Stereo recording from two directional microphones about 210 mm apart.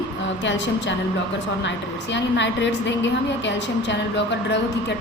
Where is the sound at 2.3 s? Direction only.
60° left (ahead or behind).